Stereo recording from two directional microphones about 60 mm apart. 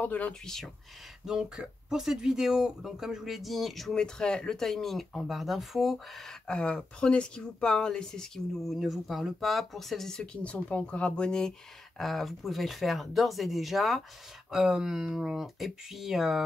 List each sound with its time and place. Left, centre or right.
0.0 s speech: left
0.3 s speech: centre
1.2 s speech: centre
6.4 s speech: centre